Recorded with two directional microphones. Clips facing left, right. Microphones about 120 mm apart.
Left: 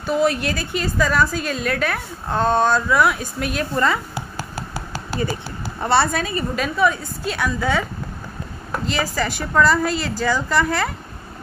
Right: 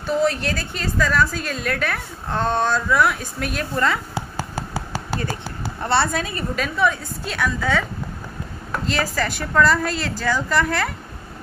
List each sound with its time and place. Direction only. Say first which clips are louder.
0.0 s a woman's voice: left 1 dB; 10° left (ahead or behind)
4.1 s a sound: right 2 dB; 25° right (ahead or behind)
5.8 s a woman's voice: left 2 dB; 5° left (ahead or behind)
8.8 s a woman's voice: even; 5° left (ahead or behind)